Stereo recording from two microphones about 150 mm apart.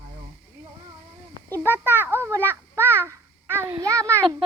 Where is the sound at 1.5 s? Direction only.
15° right (ahead or behind).